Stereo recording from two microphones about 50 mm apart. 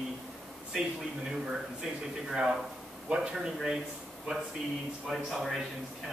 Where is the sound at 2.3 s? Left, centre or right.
Centre.